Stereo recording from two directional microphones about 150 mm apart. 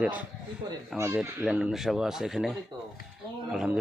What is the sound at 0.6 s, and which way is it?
Speech, 30° right (ahead or behind).